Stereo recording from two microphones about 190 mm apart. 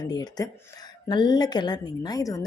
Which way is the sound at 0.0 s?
20° left (ahead or behind).